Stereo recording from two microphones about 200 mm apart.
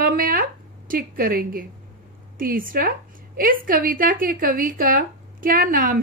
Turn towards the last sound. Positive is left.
turn(degrees=-45)  # may be behind; listen again after turning